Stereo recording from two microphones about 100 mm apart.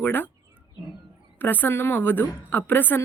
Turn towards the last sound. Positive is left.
turn(degrees=20)  # may be behind; listen again after turning